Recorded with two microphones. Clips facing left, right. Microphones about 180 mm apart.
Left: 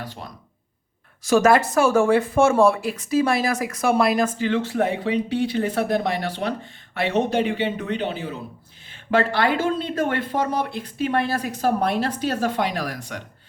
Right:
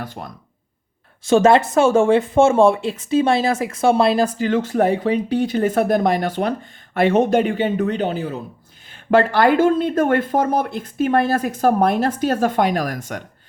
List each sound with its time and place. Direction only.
0.0 s speech: 50° right (ahead or behind)
1.2 s speech: 25° right (ahead or behind); by 13.2 s 50° right (ahead or behind)